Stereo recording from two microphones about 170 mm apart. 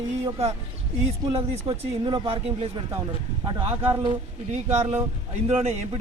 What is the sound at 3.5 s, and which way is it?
Speech, 35° right (ahead or behind).